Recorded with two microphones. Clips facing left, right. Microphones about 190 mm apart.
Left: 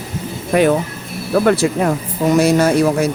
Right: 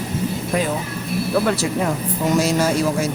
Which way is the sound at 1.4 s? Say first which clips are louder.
Left 6 dB; 55° left (ahead or behind).